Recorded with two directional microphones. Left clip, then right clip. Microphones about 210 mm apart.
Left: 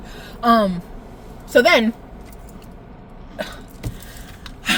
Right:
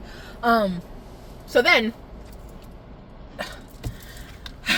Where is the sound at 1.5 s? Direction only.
15° left (ahead or behind).